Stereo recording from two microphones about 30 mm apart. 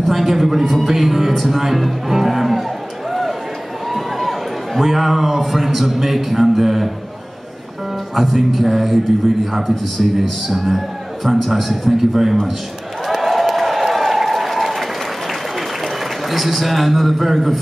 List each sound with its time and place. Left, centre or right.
0.1 s a man's voice: centre
3.1 s a sound: centre
3.9 s a man's voice: centre
8.1 s a man's voice: centre
13.0 s applause: centre
15.8 s a man's voice: centre